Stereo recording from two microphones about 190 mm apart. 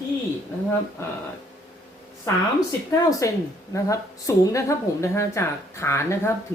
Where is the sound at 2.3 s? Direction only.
15° left (ahead or behind).